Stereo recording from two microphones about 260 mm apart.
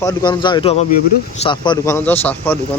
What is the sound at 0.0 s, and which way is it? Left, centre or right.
Speech, centre.